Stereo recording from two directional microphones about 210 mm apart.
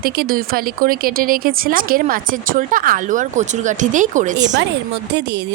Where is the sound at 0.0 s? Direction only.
45° right (ahead or behind).